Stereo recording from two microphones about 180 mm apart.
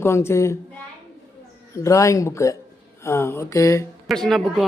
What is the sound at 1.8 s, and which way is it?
Speech, 15° left (ahead or behind).